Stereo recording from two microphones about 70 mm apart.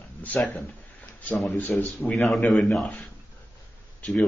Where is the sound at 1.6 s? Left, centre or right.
Left.